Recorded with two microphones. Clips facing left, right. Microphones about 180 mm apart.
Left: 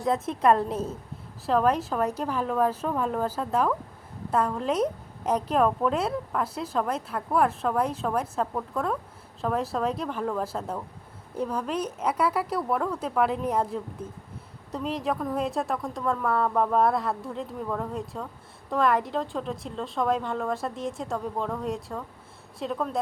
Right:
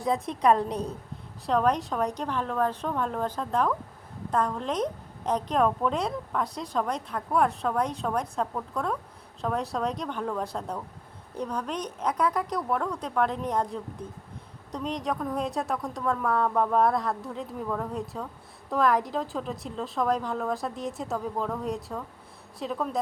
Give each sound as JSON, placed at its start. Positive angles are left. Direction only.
{"t": 0.0, "sound": "a woman's voice", "side_deg": 0}